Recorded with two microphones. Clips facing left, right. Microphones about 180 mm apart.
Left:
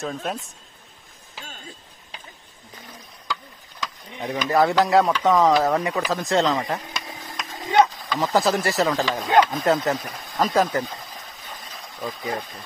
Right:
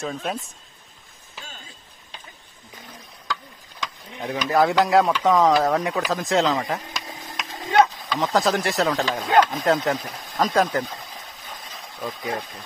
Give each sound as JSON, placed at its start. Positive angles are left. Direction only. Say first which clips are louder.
{"t": 0.0, "sound": "speech", "louder": "even", "side_deg": 0}
{"t": 4.1, "sound": "speech", "louder": "even", "side_deg": 0}